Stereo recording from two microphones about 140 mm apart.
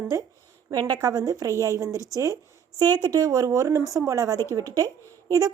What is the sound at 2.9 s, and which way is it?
A woman's voice, 30° right (ahead or behind).